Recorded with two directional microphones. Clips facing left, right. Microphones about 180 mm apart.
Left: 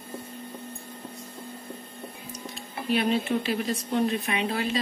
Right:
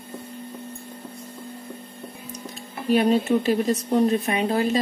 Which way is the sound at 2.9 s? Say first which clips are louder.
Right 6 dB; 40° right (ahead or behind).